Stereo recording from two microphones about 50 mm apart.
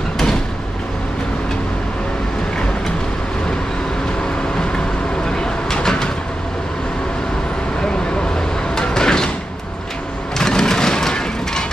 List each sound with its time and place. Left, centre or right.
4.6 s vehicle: centre
8.7 s door: centre
10.3 s a sound: centre